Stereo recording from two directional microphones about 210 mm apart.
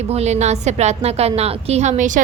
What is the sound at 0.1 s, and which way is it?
A woman's voice, 30° right (ahead or behind).